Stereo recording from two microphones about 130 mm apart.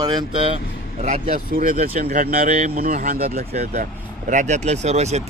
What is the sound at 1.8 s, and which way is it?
Speech, 55° right (ahead or behind).